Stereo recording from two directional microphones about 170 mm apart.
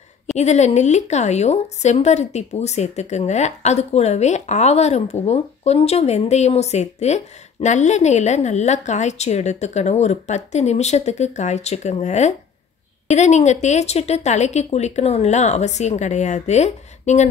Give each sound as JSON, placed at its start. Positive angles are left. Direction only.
{"t": 0.4, "sound": "speech", "side_deg": 40}